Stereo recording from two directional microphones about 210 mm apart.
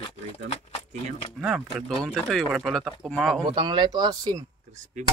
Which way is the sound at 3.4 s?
20° right (ahead or behind).